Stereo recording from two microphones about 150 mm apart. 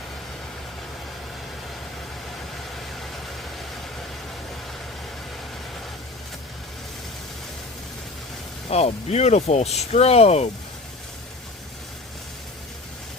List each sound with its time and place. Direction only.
8.7 s speech: 45° left (ahead or behind)